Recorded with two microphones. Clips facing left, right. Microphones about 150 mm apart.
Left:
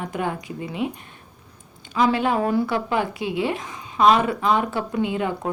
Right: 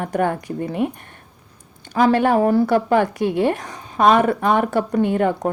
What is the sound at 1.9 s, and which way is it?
Speech, 50° right (ahead or behind).